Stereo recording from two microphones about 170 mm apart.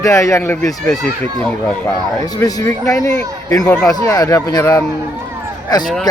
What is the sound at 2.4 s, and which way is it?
A man's voice, 20° left (ahead or behind).